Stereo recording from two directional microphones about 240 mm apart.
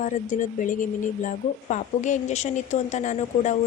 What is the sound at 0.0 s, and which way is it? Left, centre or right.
Speech, left.